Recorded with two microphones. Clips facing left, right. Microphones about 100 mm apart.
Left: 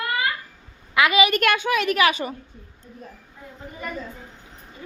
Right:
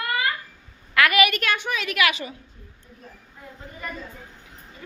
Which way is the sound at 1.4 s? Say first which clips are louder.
Left 5 dB; 65° left (ahead or behind).